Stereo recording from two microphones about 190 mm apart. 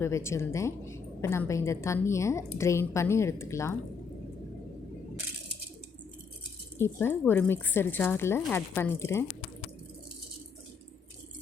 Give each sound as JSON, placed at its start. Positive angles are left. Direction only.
{"t": 0.0, "sound": "a woman's voice", "side_deg": 15}
{"t": 6.7, "sound": "a woman's voice", "side_deg": 10}